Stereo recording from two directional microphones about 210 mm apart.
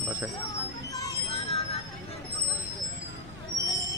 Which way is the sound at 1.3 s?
25° left (ahead or behind).